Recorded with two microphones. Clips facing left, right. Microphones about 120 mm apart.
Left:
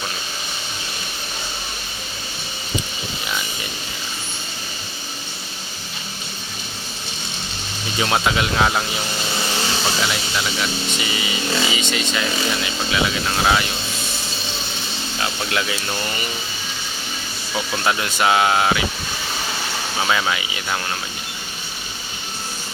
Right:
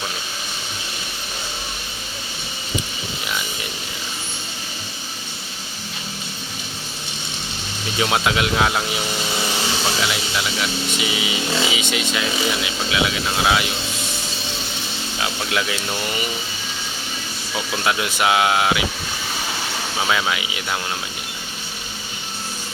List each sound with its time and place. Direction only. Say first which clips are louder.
7.9 s speech: even; centre (ahead or behind)
15.2 s speech: even; centre (ahead or behind)
17.5 s speech: left 1 dB; 5° right (ahead or behind)
20.0 s speech: left 1 dB; centre (ahead or behind)